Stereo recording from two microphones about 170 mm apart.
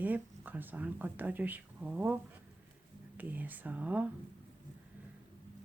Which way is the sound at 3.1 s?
10° right (ahead or behind).